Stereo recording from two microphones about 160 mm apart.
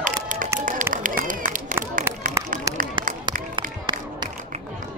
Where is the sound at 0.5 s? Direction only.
55° right (ahead or behind).